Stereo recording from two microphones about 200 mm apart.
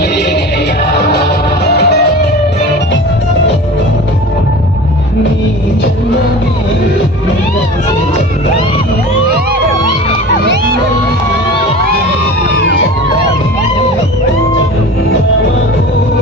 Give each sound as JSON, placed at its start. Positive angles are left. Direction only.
{"t": 1.7, "sound": "music", "side_deg": 55}